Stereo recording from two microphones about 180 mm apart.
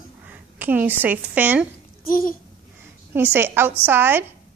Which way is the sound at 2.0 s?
55° left (ahead or behind).